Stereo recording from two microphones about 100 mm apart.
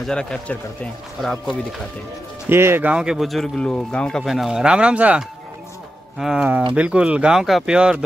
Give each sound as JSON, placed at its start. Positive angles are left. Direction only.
{"t": 0.0, "sound": "a man's voice", "side_deg": 5}
{"t": 2.5, "sound": "speech", "side_deg": -25}
{"t": 2.9, "sound": "speech", "side_deg": -10}
{"t": 4.2, "sound": "speech", "side_deg": 0}